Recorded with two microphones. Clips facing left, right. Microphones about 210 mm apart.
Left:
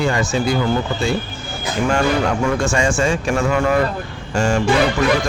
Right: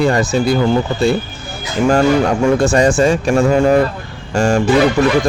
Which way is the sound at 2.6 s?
35° right (ahead or behind).